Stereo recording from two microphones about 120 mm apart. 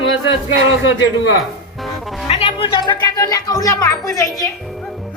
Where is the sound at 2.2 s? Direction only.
55° left (ahead or behind); by 4.3 s 30° left (ahead or behind).